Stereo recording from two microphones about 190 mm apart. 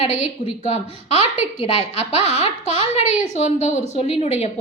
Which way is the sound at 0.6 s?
35° left (ahead or behind).